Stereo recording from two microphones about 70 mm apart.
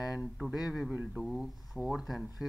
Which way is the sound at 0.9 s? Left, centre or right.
Centre.